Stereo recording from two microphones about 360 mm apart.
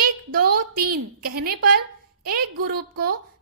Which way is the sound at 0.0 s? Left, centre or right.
Right.